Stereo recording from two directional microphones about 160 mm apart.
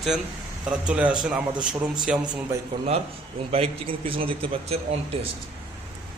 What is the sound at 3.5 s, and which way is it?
A man's voice, 35° right (ahead or behind).